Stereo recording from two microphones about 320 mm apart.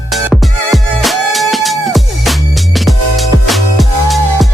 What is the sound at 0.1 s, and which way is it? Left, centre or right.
Music, centre.